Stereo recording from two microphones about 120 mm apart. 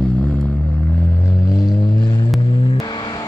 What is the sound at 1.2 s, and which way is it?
Vehicle, 30° left (ahead or behind).